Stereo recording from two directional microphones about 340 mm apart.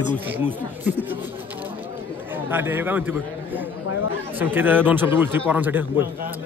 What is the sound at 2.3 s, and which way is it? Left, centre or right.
A man's voice, centre.